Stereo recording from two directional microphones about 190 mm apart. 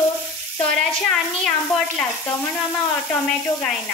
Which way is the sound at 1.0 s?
5° left (ahead or behind).